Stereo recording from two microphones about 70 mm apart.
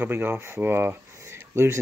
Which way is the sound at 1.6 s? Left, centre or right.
Right.